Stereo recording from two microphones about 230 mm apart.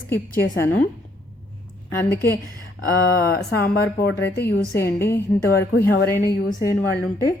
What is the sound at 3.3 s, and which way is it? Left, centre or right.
Speech, left.